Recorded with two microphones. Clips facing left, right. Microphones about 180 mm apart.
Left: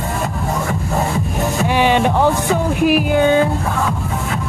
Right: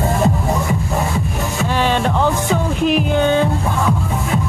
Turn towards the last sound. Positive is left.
turn(degrees=10)  # may be behind; listen again after turning